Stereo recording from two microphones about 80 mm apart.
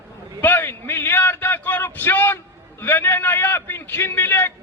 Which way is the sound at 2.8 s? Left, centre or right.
Left.